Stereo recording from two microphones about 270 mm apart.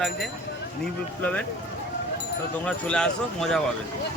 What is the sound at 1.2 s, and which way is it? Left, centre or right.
Speech, centre.